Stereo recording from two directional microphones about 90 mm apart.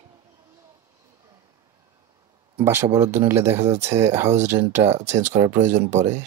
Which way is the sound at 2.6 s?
30° right (ahead or behind).